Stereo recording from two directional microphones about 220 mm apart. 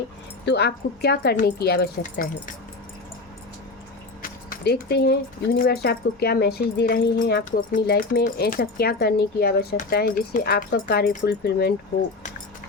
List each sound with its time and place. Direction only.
0.4 s speech: 50° left (ahead or behind)
4.2 s a sound: 45° left (ahead or behind)
5.5 s speech: 45° left (ahead or behind)